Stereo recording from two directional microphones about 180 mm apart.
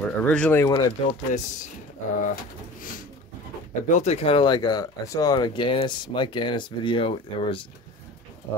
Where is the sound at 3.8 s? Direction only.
40° left (ahead or behind).